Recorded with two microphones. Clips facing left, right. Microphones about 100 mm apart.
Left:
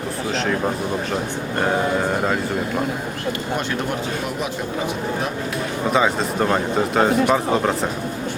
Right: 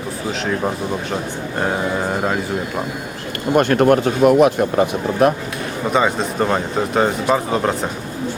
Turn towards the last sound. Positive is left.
turn(degrees=0)  # may be behind; listen again after turning